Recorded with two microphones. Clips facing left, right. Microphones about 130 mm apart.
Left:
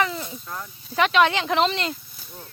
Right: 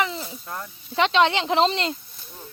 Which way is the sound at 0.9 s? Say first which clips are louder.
Even; 25° right (ahead or behind).